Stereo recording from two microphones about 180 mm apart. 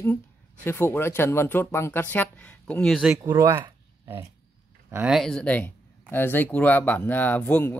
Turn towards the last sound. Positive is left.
turn(degrees=10)  # may be behind; listen again after turning